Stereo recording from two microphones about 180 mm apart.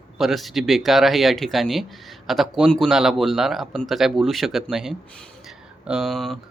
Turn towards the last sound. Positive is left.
turn(degrees=0)  # may be behind; listen again after turning